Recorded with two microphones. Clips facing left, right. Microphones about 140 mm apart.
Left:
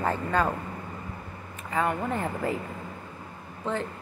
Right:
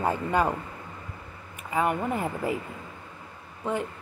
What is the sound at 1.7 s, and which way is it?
Speech, 10° right (ahead or behind).